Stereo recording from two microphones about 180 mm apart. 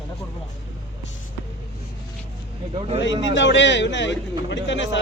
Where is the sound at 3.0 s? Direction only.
90° left.